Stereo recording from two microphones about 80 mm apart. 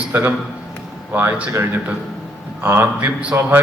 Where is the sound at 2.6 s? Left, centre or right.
Right.